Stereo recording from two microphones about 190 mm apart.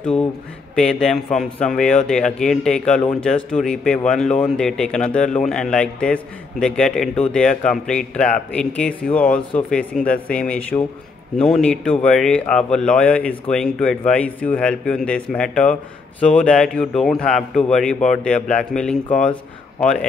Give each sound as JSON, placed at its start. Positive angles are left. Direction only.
{"t": 0.7, "sound": "speech", "side_deg": 5}